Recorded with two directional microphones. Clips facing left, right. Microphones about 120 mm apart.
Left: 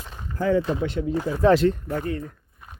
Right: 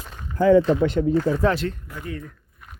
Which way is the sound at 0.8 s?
55° right (ahead or behind).